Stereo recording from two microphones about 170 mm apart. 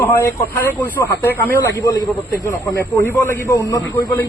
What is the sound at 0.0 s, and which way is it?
A man's voice, 10° left (ahead or behind).